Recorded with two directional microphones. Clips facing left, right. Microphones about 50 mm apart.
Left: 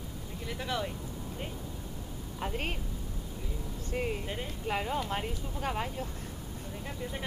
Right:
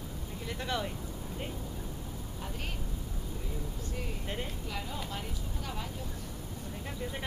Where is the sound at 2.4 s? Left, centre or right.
Left.